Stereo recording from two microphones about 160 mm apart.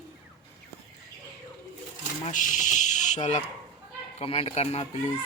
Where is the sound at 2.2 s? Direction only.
50° left (ahead or behind).